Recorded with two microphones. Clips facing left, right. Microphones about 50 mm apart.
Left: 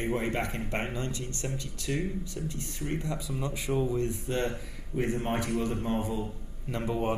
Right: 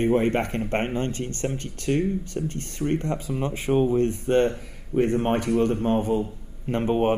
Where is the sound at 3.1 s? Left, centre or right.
Right.